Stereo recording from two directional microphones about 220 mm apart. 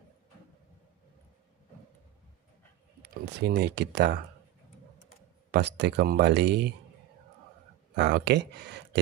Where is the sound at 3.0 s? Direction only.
50° right (ahead or behind).